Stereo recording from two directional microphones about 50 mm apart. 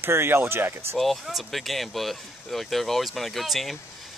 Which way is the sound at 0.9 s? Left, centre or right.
Centre.